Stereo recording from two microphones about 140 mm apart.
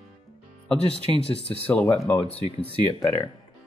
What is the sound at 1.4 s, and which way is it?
Speech, 10° left (ahead or behind).